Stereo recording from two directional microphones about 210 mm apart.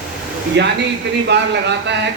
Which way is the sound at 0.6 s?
55° right (ahead or behind).